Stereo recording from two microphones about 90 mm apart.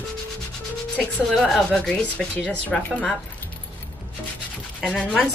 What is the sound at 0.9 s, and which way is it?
Speech, 5° left (ahead or behind).